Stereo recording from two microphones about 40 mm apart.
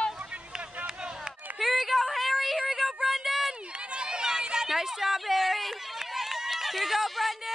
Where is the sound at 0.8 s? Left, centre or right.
Right.